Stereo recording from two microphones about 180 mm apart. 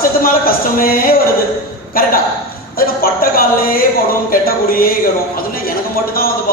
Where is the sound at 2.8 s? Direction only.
55° left (ahead or behind).